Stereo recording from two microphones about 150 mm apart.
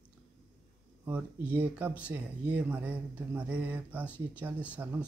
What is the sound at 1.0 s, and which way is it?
Speech, 10° right (ahead or behind).